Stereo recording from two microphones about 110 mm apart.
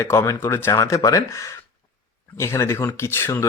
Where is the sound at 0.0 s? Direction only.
25° left (ahead or behind).